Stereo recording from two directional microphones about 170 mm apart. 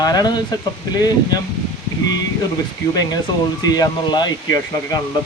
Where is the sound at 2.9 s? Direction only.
25° left (ahead or behind).